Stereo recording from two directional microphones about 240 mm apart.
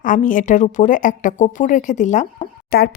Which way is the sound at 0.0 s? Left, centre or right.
Left.